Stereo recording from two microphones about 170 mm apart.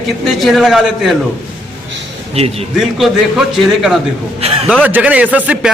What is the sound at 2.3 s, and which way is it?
Speech, 35° right (ahead or behind).